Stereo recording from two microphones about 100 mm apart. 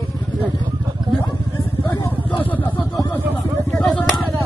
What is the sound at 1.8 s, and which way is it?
Speech, 40° left (ahead or behind).